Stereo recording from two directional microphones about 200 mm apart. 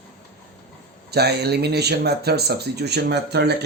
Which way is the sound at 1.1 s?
55° right (ahead or behind).